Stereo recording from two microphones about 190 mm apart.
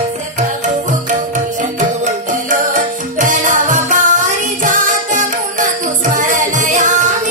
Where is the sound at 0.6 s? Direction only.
40° right (ahead or behind).